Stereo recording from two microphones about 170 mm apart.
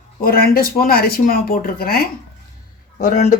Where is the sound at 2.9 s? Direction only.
50° left (ahead or behind).